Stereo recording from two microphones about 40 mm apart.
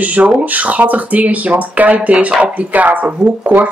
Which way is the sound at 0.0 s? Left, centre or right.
Right.